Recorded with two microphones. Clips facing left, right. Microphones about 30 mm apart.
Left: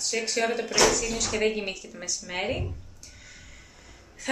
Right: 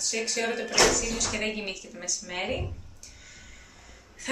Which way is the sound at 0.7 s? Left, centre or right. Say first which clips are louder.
Right 1 dB; centre.